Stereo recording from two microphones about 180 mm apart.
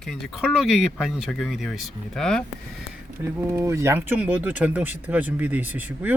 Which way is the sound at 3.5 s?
15° right (ahead or behind).